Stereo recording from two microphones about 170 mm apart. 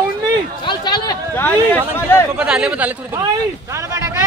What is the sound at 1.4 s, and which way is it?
Speech, 10° left (ahead or behind).